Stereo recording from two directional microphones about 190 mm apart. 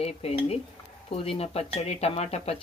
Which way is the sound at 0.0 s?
35° left (ahead or behind).